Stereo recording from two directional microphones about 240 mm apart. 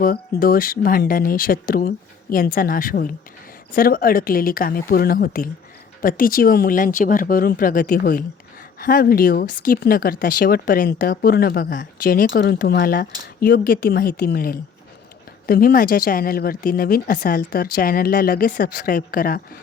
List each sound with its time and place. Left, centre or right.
0.0 s speech: left